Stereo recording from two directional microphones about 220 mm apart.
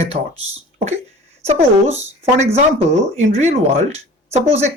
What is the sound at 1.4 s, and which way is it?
Speech, 30° right (ahead or behind).